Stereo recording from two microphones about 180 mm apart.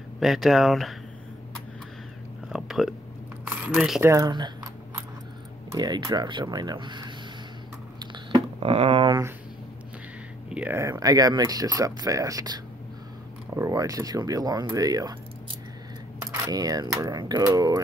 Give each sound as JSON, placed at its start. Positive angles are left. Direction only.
{"t": 0.2, "sound": "speech", "side_deg": 0}
{"t": 2.5, "sound": "a sound", "side_deg": 0}
{"t": 3.7, "sound": "speech", "side_deg": 0}
{"t": 4.0, "sound": "speech", "side_deg": -15}
{"t": 5.7, "sound": "speech", "side_deg": -25}
{"t": 8.0, "sound": "a sound", "side_deg": -25}
{"t": 10.5, "sound": "speech", "side_deg": -10}
{"t": 16.2, "sound": "speech", "side_deg": -20}